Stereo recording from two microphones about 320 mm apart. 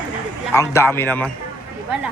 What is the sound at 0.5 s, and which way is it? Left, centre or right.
Speech, centre.